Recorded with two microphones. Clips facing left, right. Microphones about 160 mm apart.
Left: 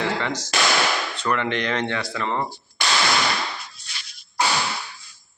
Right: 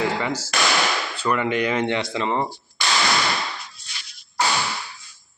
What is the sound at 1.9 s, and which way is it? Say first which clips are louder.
Speech: right 3 dB; 20° right (ahead or behind).